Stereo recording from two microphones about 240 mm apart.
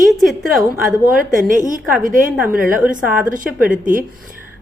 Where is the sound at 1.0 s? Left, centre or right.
Right.